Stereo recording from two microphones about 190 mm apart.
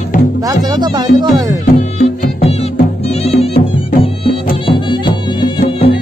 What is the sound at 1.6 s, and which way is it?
Music, 45° left (ahead or behind).